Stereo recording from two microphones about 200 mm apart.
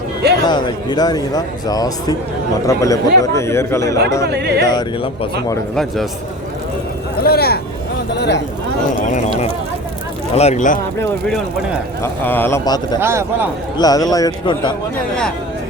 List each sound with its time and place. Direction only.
0.4 s speech: 20° left (ahead or behind)
4.3 s speech: 55° right (ahead or behind)
4.6 s speech: 20° left (ahead or behind)
5.7 s a man's voice: centre (ahead or behind)
7.2 s vehicle: 50° left (ahead or behind)
9.0 s a sound: 40° left (ahead or behind)
10.3 s speech: 35° left (ahead or behind)
12.0 s speech: 10° left (ahead or behind)
13.0 s a man's voice: 10° right (ahead or behind)
13.7 s speech: 20° left (ahead or behind)